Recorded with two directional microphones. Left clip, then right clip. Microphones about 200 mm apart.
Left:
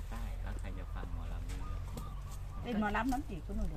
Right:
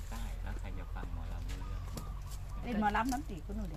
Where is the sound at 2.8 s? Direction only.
10° left (ahead or behind).